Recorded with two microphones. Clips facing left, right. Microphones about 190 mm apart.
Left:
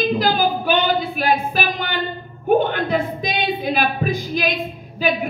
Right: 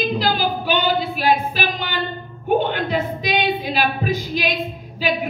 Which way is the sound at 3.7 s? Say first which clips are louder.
Even; 50° left (ahead or behind).